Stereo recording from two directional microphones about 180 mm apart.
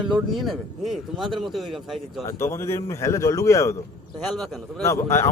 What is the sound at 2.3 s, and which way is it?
A man's voice, 15° left (ahead or behind).